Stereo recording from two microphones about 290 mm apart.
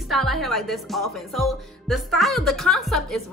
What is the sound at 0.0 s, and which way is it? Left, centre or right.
A woman's voice, centre.